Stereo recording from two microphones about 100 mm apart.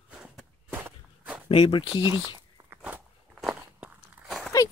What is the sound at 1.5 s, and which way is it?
Speech, 60° left (ahead or behind).